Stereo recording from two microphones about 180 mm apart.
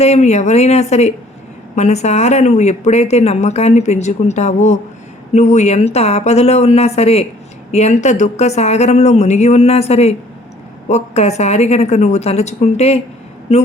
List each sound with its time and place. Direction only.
0.0 s speech: 35° left (ahead or behind)